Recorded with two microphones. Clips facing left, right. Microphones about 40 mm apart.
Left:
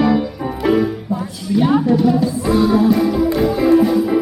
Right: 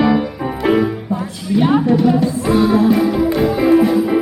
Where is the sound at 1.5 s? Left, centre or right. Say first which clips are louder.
Right 1 dB; centre.